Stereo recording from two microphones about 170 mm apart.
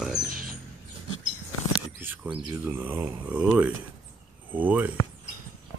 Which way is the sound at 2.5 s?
15° right (ahead or behind).